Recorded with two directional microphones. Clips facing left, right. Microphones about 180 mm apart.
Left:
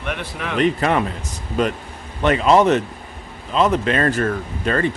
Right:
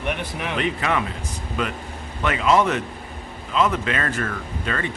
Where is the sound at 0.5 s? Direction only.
40° left (ahead or behind).